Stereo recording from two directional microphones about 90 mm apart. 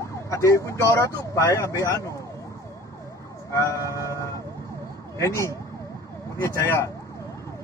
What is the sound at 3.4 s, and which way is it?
Emergency vehicle, 35° left (ahead or behind).